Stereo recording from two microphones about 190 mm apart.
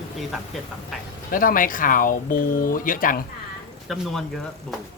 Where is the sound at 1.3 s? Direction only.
45° left (ahead or behind).